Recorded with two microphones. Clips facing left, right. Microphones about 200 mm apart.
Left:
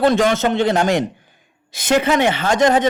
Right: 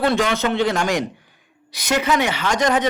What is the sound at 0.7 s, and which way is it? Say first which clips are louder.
Speech: left 4 dB; 25° left (ahead or behind).